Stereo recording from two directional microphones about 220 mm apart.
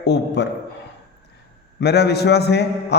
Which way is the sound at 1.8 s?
50° left (ahead or behind).